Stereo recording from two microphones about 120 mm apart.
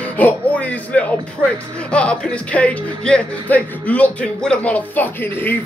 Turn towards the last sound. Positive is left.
turn(degrees=15)  # may be behind; listen again after turning